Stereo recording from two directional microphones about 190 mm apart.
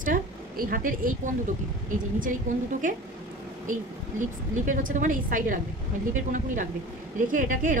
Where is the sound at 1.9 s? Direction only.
45° right (ahead or behind).